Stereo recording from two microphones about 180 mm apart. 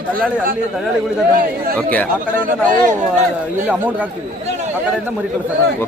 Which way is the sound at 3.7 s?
10° right (ahead or behind).